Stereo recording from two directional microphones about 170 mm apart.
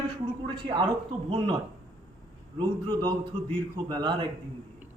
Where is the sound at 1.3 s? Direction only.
25° right (ahead or behind).